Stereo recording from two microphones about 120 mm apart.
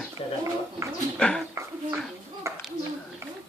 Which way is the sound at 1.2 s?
5° left (ahead or behind).